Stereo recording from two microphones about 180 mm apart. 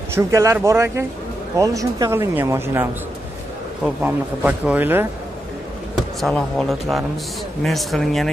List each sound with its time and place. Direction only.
0.1 s speech: 15° right (ahead or behind)
5.9 s speech: centre (ahead or behind)